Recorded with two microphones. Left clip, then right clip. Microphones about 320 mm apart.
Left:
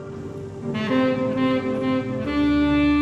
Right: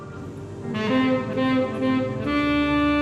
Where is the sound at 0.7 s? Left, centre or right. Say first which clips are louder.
Even; centre.